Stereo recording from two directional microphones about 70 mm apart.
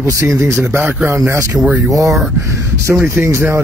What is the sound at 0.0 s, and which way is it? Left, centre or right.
Speech, right.